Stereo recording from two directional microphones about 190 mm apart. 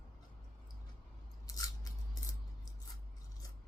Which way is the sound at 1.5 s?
20° left (ahead or behind).